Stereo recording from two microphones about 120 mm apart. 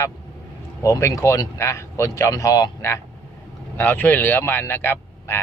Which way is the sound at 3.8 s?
15° left (ahead or behind).